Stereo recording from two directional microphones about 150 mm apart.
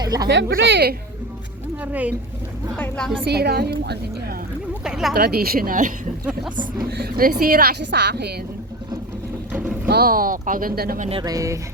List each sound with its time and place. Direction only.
0.0 s speech: 25° right (ahead or behind)
0.4 s speech: 90° right
1.8 s speech: 10° right (ahead or behind)
2.7 s a woman's voice: 10° left (ahead or behind)
3.2 s speech: 90° right
4.8 s a sound: 5° right (ahead or behind)
5.1 s a woman's voice: 90° right; by 5.9 s 65° right (ahead or behind)
7.0 s speech: 75° right (ahead or behind)
9.5 s boat: 10° right (ahead or behind)
9.8 s speech: 80° right
11.2 s speech: 25° right (ahead or behind)